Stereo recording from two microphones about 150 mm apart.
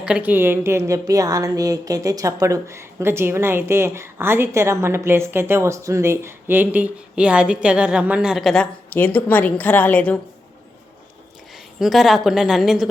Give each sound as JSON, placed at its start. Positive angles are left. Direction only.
{"t": 0.0, "sound": "a woman's voice", "side_deg": -10}
{"t": 8.9, "sound": "a woman's voice", "side_deg": 15}
{"t": 11.5, "sound": "a woman's voice", "side_deg": 0}